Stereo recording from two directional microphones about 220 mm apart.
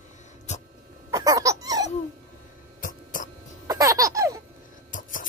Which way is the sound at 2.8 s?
35° left (ahead or behind).